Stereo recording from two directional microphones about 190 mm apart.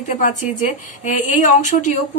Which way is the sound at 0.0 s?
45° left (ahead or behind).